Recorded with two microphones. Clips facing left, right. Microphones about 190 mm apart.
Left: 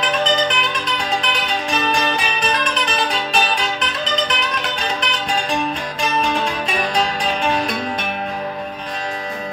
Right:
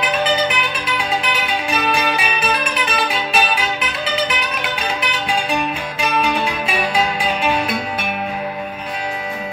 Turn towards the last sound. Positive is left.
turn(degrees=-5)  # may be behind; listen again after turning